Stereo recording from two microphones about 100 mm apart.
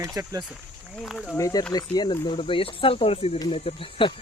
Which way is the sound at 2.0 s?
65° left (ahead or behind).